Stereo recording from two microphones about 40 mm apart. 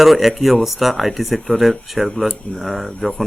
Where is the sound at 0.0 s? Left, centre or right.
Centre.